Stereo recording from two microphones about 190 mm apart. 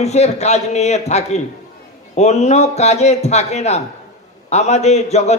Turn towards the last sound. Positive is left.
turn(degrees=35)  # may be behind; listen again after turning